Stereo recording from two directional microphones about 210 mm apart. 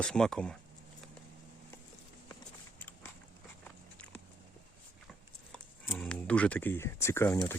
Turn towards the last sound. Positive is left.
turn(degrees=10)  # may be behind; listen again after turning